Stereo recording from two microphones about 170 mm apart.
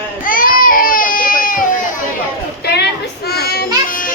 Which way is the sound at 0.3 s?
55° left (ahead or behind).